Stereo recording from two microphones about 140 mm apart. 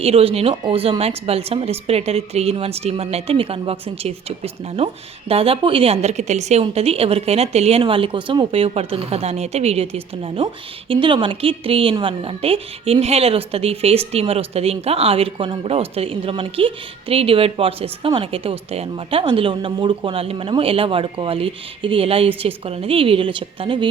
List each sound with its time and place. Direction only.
0.0 s a woman's voice: 45° right (ahead or behind)